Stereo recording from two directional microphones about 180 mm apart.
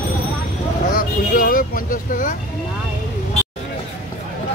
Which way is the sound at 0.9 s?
50° left (ahead or behind).